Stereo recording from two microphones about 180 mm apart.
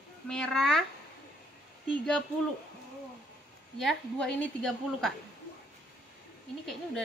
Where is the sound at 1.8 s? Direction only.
5° left (ahead or behind).